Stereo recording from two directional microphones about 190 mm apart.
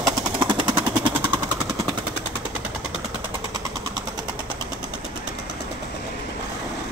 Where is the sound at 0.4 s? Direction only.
25° right (ahead or behind).